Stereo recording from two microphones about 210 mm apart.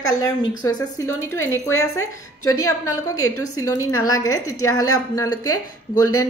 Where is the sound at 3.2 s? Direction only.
85° left.